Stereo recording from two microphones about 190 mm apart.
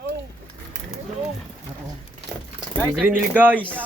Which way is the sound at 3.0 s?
10° right (ahead or behind).